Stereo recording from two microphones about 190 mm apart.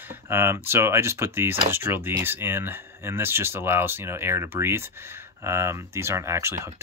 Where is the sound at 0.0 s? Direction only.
10° right (ahead or behind).